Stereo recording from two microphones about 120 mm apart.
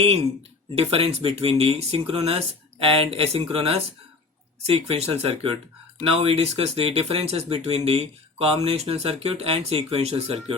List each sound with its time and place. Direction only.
0.0 s speech: 55° right (ahead or behind)